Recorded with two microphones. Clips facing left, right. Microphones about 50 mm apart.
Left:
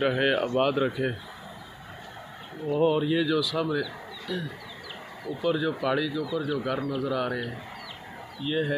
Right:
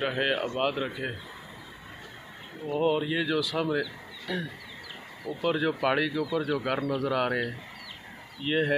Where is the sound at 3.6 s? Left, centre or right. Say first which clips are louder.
Left 1 dB; right.